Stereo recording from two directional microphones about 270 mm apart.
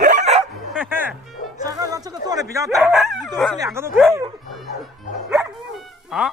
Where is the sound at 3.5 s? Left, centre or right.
Centre.